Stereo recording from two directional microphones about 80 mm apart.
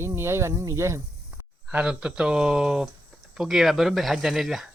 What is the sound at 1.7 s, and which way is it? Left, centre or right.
Speech, centre.